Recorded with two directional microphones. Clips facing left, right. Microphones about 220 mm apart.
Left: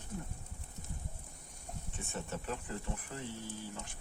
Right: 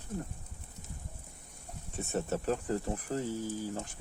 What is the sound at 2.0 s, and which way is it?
Speech, 40° right (ahead or behind).